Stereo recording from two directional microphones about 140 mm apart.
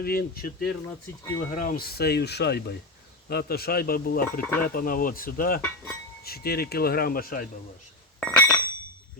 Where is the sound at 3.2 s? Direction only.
90° left.